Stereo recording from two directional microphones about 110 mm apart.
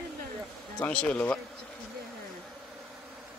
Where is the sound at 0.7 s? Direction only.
10° left (ahead or behind).